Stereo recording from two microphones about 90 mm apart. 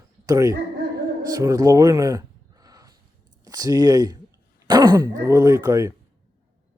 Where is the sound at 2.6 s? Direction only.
40° right (ahead or behind).